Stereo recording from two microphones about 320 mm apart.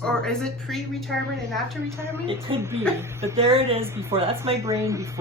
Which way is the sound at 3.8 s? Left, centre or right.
Centre.